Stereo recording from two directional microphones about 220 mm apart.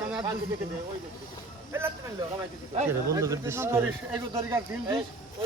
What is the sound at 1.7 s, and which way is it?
Speech, 10° right (ahead or behind).